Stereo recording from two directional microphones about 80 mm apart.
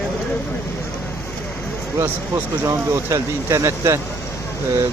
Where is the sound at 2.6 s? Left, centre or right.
Right.